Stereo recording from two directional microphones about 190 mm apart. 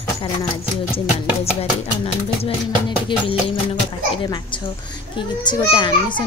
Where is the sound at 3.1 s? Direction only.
25° left (ahead or behind).